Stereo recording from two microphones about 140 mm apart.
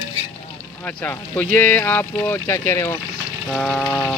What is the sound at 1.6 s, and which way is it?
Speech, 10° left (ahead or behind).